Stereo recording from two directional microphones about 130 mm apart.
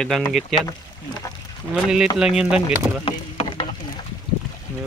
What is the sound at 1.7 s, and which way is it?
Speech, 5° right (ahead or behind).